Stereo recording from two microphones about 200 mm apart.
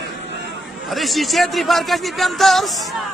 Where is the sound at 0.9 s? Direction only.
Centre (ahead or behind).